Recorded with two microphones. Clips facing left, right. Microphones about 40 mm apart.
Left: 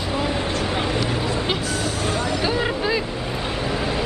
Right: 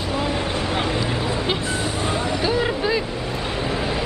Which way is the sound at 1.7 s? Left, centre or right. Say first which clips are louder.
Even; right.